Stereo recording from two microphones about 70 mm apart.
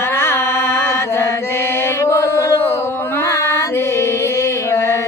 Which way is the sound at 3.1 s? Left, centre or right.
Left.